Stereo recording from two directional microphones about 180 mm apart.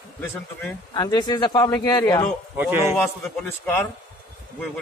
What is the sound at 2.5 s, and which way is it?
Speech, 10° right (ahead or behind).